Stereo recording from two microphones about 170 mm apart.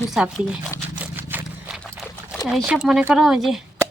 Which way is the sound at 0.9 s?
10° right (ahead or behind).